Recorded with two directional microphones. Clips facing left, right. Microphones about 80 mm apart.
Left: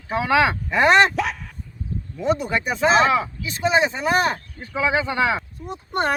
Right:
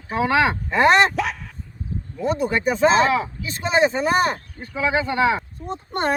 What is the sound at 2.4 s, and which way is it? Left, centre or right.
Speech, right.